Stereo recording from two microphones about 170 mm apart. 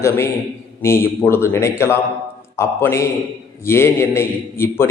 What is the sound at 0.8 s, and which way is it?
A man's voice, 15° left (ahead or behind).